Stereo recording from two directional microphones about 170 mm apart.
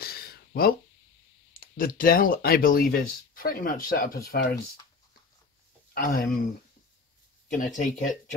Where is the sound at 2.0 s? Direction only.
55° left (ahead or behind).